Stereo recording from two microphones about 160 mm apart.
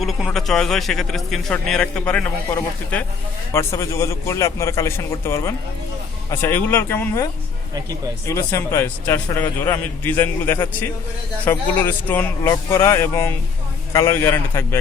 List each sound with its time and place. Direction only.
0.0 s a man's voice: centre (ahead or behind); by 7.3 s 15° left (ahead or behind)
8.3 s a man's voice: 15° left (ahead or behind)